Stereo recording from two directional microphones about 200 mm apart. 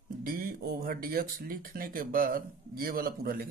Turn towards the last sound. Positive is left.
turn(degrees=-50)  # may be behind; listen again after turning